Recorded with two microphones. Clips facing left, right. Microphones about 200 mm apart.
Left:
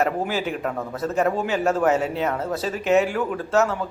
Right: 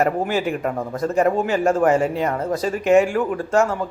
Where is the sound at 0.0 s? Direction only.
Centre (ahead or behind).